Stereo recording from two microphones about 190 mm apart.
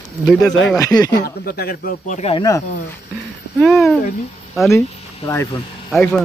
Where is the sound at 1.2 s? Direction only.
50° left (ahead or behind).